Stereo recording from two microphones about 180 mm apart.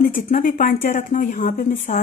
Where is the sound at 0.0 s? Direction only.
50° left (ahead or behind).